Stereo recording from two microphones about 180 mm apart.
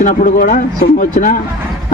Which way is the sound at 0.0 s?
45° left (ahead or behind).